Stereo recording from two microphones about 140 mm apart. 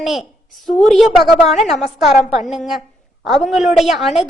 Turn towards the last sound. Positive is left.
turn(degrees=0)  # may be behind; listen again after turning